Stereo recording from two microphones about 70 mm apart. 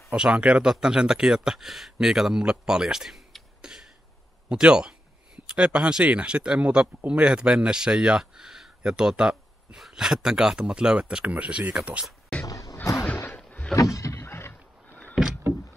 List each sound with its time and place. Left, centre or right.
0.1 s speech: centre
12.4 s a sound: left
13.7 s vehicle: left
14.2 s rowboat: left